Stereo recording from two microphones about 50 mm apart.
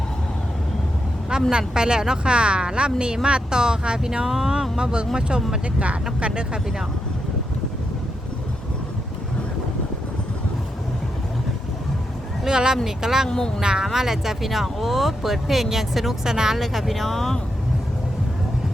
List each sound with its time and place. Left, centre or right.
1.3 s speech: centre
12.5 s speech: centre
13.2 s speech: centre
13.6 s speech: centre